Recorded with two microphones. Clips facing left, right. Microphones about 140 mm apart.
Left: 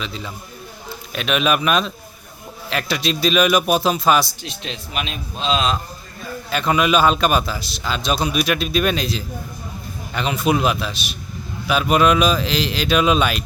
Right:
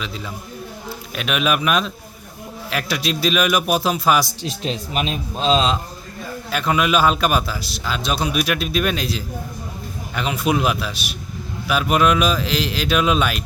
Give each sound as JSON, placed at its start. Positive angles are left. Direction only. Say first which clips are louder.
{"t": 0.0, "sound": "a man's voice", "louder": "even", "side_deg": -5}
{"t": 4.4, "sound": "speech", "louder": "right 6 dB", "side_deg": -40}
{"t": 6.5, "sound": "a man's voice", "louder": "left 1 dB", "side_deg": -5}